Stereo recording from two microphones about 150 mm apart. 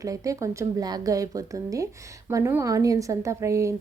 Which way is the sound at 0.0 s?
20° right (ahead or behind).